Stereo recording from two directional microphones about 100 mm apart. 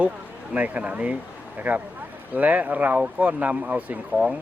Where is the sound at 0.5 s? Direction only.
15° right (ahead or behind).